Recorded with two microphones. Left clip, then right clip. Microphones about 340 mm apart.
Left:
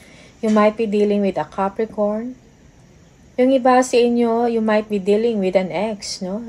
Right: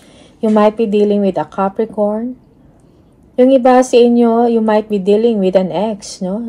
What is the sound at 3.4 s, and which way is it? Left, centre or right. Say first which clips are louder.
Speech: right 6 dB; right.